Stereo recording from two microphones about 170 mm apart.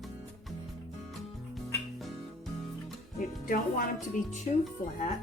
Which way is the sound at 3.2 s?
50° left (ahead or behind).